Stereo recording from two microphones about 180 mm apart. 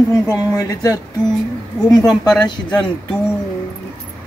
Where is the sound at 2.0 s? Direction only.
5° left (ahead or behind).